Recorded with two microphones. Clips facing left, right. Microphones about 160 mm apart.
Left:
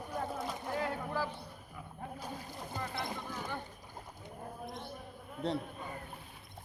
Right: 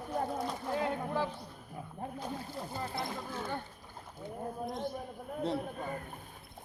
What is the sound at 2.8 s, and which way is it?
Speech, 25° right (ahead or behind).